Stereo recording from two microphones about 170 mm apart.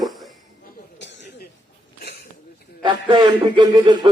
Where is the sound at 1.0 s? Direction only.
90° left.